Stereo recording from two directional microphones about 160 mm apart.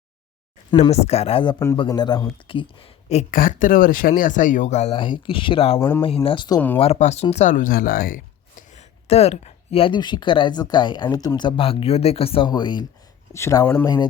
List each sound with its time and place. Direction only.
0.8 s speech: 40° left (ahead or behind)
3.3 s speech: 60° left (ahead or behind)
8.7 s speech: 40° left (ahead or behind); by 13.8 s 15° left (ahead or behind)
13.8 s speech: 25° left (ahead or behind)